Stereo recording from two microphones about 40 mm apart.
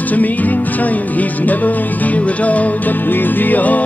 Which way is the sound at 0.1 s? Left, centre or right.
Left.